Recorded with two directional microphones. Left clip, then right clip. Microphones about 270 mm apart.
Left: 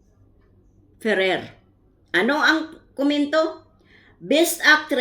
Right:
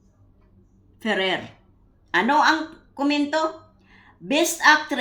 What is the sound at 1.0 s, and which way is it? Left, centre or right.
Speech, right.